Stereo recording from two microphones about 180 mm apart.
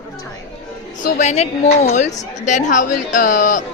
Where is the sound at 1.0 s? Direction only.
40° left (ahead or behind).